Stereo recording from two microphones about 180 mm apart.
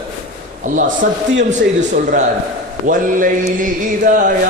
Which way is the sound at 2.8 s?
45° right (ahead or behind).